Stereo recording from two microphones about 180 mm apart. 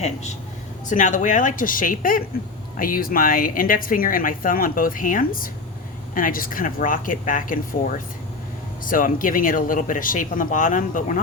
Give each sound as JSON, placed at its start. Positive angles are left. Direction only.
{"t": 0.0, "sound": "a woman's voice", "side_deg": 40}
{"t": 8.8, "sound": "a woman's voice", "side_deg": 50}